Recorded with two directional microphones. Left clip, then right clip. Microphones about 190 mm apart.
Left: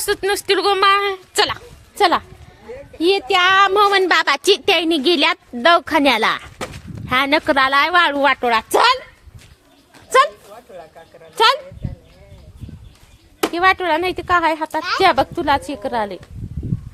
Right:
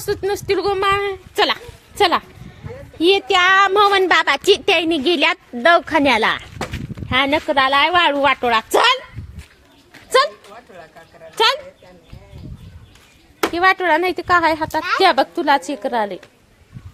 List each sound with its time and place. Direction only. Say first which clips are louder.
0.0 s a woman's voice: left 2 dB; centre (ahead or behind); by 8.2 s 25° left (ahead or behind)
8.2 s a woman's voice: even; 10° left (ahead or behind)
11.3 s a child's voice: left 2 dB; centre (ahead or behind)
13.5 s speech: right 1 dB; centre (ahead or behind)